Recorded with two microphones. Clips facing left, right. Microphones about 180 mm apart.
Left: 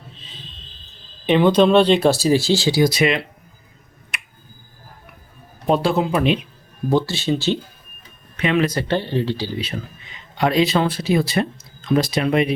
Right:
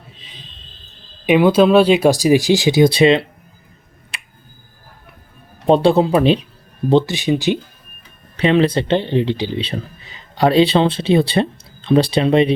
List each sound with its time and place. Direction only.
1.3 s speech: 10° right (ahead or behind); by 3.2 s 30° right (ahead or behind)
4.1 s finger snapping: 30° right (ahead or behind)
5.6 s speech: 30° right (ahead or behind)
6.9 s speech: 15° right (ahead or behind)
8.4 s speech: 30° right (ahead or behind)
9.6 s speech: 35° right (ahead or behind)